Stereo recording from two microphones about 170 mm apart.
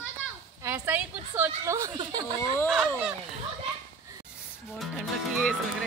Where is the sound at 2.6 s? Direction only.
Centre (ahead or behind).